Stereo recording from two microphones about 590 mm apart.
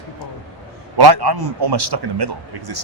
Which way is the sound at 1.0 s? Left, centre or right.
Right.